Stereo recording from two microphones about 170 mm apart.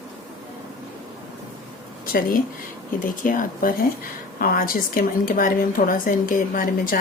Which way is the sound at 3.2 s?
50° left (ahead or behind).